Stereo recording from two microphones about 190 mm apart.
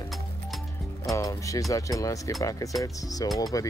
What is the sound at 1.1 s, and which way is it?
Speech, 15° left (ahead or behind).